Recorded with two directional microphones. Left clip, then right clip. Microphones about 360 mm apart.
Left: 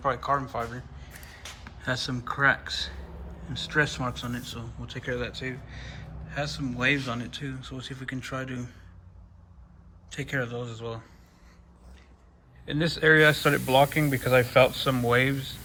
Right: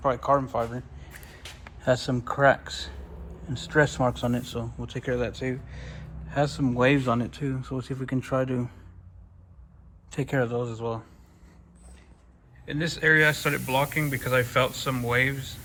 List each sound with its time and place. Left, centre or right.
0.0 s speech: centre
10.1 s speech: centre
12.6 s speech: centre